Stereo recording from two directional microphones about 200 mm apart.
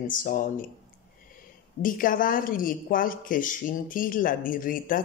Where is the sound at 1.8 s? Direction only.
45° left (ahead or behind).